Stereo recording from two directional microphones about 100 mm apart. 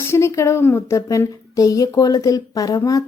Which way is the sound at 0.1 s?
30° left (ahead or behind).